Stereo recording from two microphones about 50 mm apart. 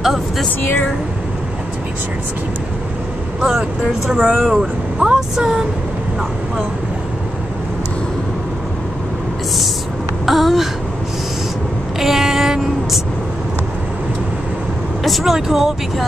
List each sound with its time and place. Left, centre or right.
3.3 s speech: centre
4.4 s speech: centre
4.9 s a sound: centre
5.3 s speech: centre
10.2 s speech: centre
12.0 s vehicle: centre
15.0 s speech: centre